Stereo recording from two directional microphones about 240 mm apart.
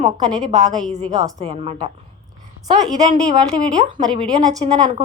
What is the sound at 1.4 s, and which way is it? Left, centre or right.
Speech, right.